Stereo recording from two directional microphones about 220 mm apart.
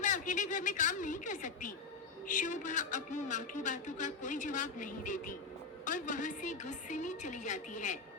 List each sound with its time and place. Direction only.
0.0 s a man's voice: 35° left (ahead or behind)